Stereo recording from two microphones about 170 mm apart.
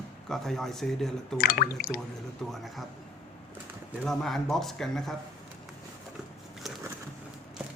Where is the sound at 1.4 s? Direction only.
60° left (ahead or behind).